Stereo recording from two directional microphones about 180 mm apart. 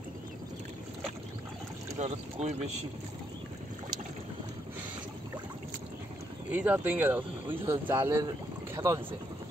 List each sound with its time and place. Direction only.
2.0 s speech: 40° right (ahead or behind)
6.5 s speech: 10° right (ahead or behind)